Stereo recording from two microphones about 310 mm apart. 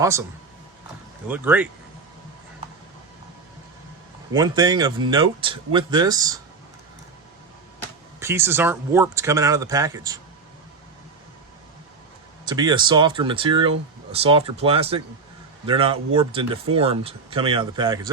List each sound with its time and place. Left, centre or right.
0.0 s speech: centre
1.3 s speech: centre
4.3 s speech: centre
8.2 s speech: centre
12.5 s speech: centre